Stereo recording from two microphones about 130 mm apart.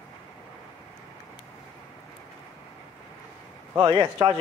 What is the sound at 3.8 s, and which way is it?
Speech, 25° right (ahead or behind).